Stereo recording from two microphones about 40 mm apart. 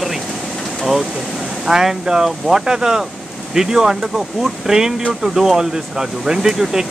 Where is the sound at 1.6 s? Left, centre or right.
Centre.